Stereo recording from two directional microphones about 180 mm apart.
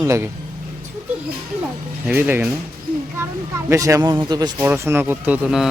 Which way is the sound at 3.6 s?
15° right (ahead or behind).